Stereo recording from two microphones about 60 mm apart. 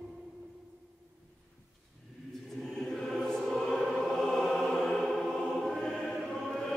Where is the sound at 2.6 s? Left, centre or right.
Centre.